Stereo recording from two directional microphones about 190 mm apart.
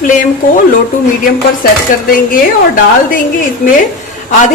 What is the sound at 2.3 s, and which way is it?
Speech, 45° left (ahead or behind).